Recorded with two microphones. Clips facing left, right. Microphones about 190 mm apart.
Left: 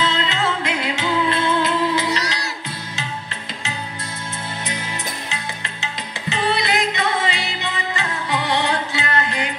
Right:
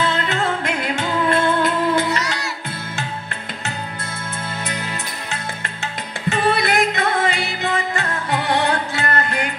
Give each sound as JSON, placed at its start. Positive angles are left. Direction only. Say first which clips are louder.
{"t": 0.0, "sound": "music", "louder": "right 1 dB", "side_deg": -55}
{"t": 2.0, "sound": "music", "louder": "right 1 dB", "side_deg": 35}
{"t": 5.3, "sound": "music", "louder": "right 2 dB", "side_deg": -55}